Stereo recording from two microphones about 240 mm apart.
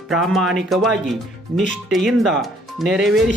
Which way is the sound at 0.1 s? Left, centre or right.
Centre.